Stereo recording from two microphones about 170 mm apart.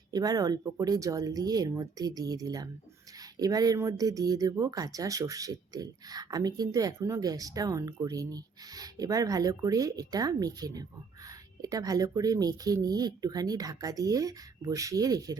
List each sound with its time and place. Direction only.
0.1 s speech: 20° right (ahead or behind)